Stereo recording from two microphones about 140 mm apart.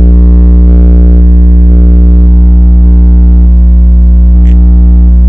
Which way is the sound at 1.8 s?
Centre (ahead or behind).